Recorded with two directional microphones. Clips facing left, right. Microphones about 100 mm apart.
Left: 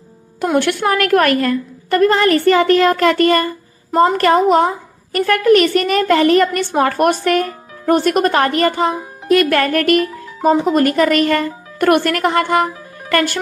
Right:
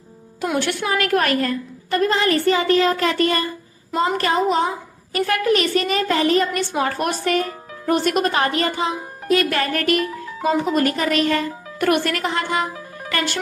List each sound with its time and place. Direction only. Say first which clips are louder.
0.6 s a woman's voice: left 5 dB; 55° left (ahead or behind)
7.9 s a woman's voice: left 5 dB; 50° left (ahead or behind)